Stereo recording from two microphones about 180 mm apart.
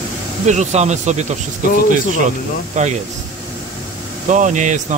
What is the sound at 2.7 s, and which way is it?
Speech, 40° right (ahead or behind).